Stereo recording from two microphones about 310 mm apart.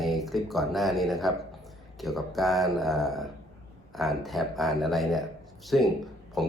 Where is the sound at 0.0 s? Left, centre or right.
Centre.